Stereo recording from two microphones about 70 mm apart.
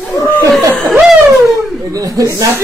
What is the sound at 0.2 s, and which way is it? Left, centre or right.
Laughter, left.